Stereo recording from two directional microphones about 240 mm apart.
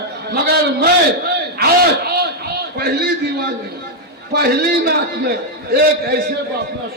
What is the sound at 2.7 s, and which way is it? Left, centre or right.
A man's voice, right.